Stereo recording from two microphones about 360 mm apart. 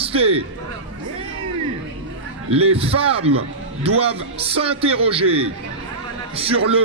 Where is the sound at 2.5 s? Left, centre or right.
Centre.